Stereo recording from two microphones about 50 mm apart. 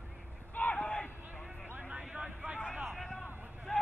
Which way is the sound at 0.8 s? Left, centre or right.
Left.